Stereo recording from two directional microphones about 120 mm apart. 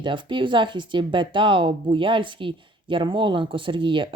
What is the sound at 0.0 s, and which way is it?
Speech, 40° right (ahead or behind).